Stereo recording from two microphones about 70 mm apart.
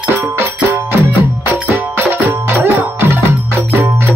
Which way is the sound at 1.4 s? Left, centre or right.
Right.